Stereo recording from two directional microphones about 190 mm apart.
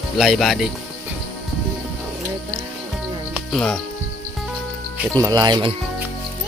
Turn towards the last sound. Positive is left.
turn(degrees=-25)  # may be behind; listen again after turning